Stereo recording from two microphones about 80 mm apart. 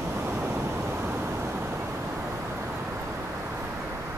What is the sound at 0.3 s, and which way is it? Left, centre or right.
Vehicle, right.